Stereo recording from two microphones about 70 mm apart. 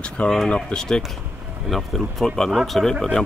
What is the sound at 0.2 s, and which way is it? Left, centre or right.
Speech, centre.